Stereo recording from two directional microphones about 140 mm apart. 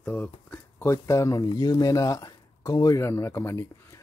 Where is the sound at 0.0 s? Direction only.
10° left (ahead or behind).